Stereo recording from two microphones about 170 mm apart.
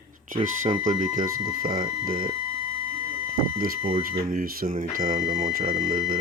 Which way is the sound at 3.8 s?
35° right (ahead or behind).